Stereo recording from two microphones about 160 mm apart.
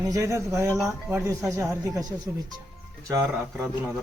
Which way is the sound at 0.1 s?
20° right (ahead or behind).